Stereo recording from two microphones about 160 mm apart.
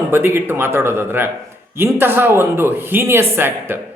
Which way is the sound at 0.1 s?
15° right (ahead or behind).